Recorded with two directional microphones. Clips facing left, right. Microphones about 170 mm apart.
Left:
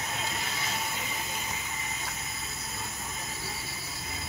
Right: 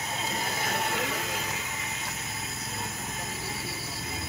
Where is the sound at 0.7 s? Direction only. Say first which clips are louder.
Right 6 dB; 65° right (ahead or behind).